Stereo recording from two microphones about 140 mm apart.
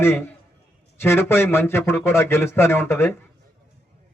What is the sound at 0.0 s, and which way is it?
A man's voice, 15° left (ahead or behind).